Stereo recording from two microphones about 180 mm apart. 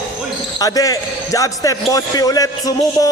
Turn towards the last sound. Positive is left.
turn(degrees=20)  # may be behind; listen again after turning